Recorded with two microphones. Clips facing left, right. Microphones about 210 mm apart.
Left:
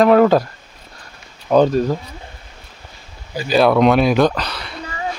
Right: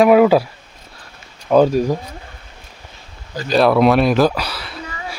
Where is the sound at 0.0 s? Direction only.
10° right (ahead or behind).